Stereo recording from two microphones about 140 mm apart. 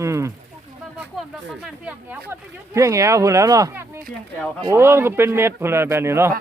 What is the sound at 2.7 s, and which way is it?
Speech, 20° right (ahead or behind).